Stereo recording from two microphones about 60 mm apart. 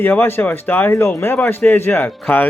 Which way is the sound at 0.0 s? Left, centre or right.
Left.